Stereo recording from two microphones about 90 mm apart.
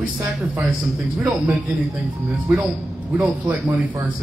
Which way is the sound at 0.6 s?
10° right (ahead or behind).